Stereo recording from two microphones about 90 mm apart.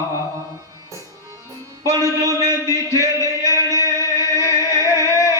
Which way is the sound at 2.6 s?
40° left (ahead or behind).